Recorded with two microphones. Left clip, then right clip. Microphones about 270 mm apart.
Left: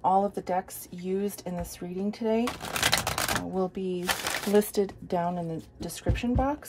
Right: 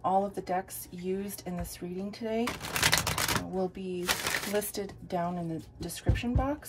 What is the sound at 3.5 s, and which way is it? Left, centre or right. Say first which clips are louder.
Speech: left 3 dB; left.